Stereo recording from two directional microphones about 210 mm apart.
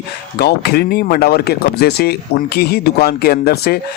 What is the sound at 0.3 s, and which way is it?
Speech, 50° left (ahead or behind).